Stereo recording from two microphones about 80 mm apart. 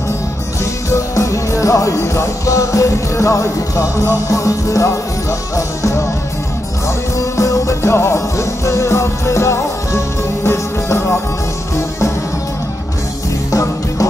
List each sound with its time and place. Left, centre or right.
0.8 s music: left
7.2 s music: left
13.5 s music: left